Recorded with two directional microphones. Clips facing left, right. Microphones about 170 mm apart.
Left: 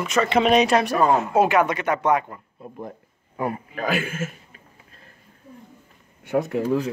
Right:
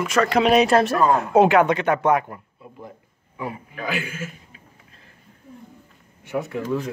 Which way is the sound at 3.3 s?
50° left (ahead or behind).